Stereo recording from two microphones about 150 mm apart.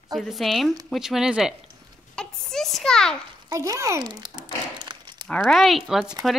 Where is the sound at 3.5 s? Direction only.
20° right (ahead or behind).